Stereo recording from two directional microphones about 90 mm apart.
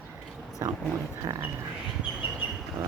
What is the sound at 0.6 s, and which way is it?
Speech, 30° right (ahead or behind).